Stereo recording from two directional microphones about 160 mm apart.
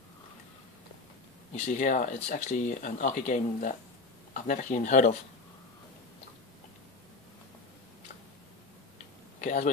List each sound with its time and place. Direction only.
1.5 s speech: 50° left (ahead or behind)
9.4 s speech: 50° left (ahead or behind)